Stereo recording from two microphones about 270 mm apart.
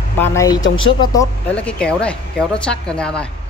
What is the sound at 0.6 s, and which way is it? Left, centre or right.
Speech, left.